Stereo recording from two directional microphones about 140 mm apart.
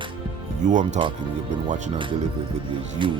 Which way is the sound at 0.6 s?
60° right (ahead or behind).